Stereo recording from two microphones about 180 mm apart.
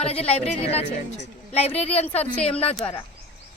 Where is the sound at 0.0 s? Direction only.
35° left (ahead or behind).